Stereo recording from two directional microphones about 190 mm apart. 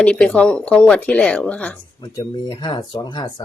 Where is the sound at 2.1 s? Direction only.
25° left (ahead or behind).